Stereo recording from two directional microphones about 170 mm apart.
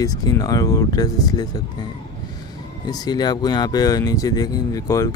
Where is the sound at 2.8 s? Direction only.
25° left (ahead or behind).